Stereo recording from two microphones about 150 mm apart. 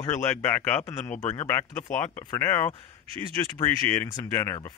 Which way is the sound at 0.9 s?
50° left (ahead or behind).